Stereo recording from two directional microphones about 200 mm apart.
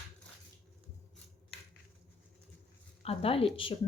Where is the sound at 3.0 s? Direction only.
30° left (ahead or behind).